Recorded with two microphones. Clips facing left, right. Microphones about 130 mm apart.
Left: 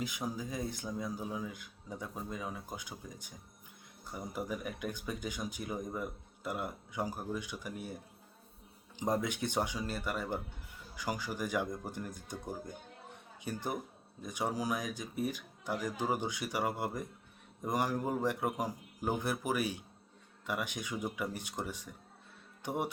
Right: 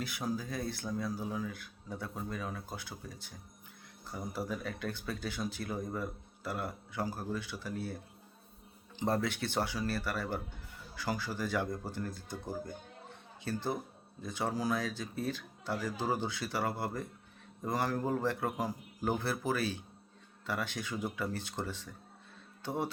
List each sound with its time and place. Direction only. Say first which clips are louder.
0.0 s speech: right 1 dB; 15° left (ahead or behind)
9.0 s speech: right 1 dB; 15° left (ahead or behind)